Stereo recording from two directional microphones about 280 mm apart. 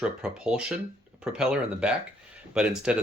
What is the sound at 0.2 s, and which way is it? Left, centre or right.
Speech, centre.